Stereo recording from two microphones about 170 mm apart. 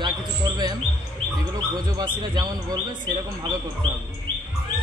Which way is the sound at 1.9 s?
25° right (ahead or behind).